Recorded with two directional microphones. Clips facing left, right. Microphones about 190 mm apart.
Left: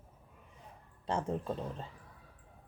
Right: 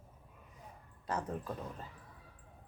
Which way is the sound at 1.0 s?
25° left (ahead or behind).